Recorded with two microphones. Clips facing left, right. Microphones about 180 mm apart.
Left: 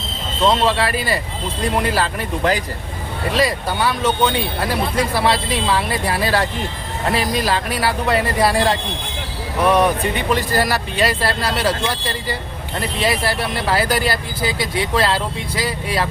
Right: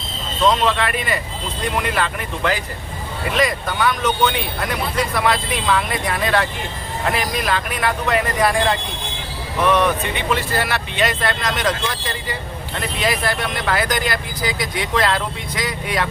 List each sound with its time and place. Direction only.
0.4 s speech: 30° left (ahead or behind)
10.2 s speech: 40° left (ahead or behind)
13.0 s speech: 30° left (ahead or behind)